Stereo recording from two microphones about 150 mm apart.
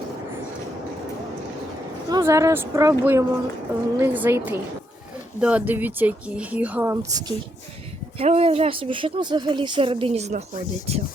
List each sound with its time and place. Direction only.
2.0 s speech: 20° right (ahead or behind)
8.2 s speech: 40° right (ahead or behind)